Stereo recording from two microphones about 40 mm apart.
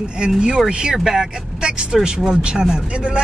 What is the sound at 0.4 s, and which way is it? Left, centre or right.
Speech, centre.